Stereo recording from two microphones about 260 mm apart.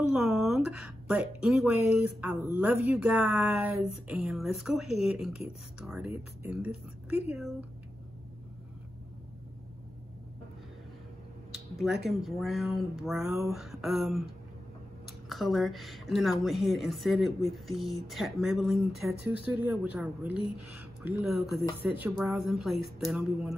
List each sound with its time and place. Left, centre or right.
0.1 s a woman's voice: centre
11.5 s a woman's voice: centre
15.2 s a woman's voice: centre